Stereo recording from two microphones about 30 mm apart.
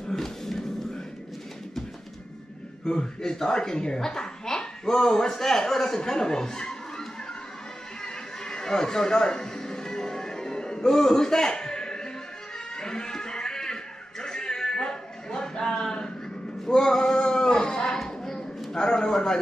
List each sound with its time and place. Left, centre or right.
0.1 s music: centre
2.9 s a man's voice: left
8.0 s a sound: left
12.7 s music: left
14.2 s a sound: left
18.7 s a man's voice: left